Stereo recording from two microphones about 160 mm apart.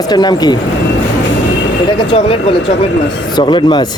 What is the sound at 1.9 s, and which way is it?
Speech, 35° left (ahead or behind).